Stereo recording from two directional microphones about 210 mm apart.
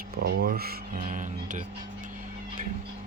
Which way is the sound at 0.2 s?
50° right (ahead or behind).